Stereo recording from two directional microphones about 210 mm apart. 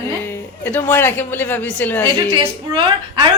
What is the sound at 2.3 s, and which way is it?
Speech, 20° right (ahead or behind).